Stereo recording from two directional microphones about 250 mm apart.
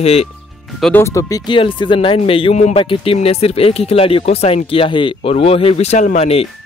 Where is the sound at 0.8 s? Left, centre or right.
Centre; by 6.5 s left.